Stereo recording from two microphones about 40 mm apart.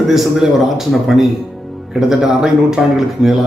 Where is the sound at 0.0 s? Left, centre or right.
Centre.